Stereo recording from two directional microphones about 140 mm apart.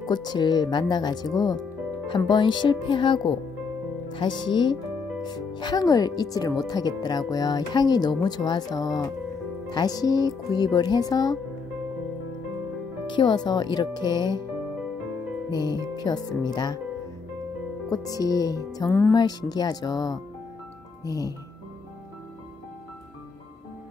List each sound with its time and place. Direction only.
0.0 s speech: 30° left (ahead or behind)
13.0 s speech: 35° left (ahead or behind)
16.0 s speech: 30° left (ahead or behind)
17.8 s speech: 25° left (ahead or behind)
19.1 s speech: 30° left (ahead or behind)